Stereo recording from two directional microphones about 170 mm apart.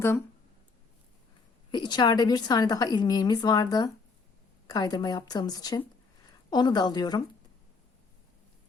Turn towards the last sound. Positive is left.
turn(degrees=25)  # may be behind; listen again after turning